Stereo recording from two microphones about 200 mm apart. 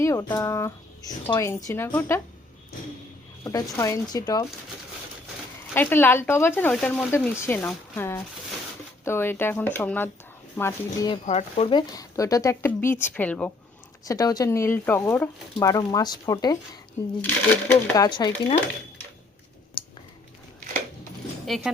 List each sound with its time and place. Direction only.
0.0 s speech: 15° left (ahead or behind)
3.4 s speech: 15° left (ahead or behind)
5.7 s speech: 10° left (ahead or behind)
11.1 s speech: 35° left (ahead or behind); by 13.5 s 5° left (ahead or behind)
14.0 s speech: 20° left (ahead or behind)
19.8 s a sound: 25° left (ahead or behind)
21.4 s speech: centre (ahead or behind)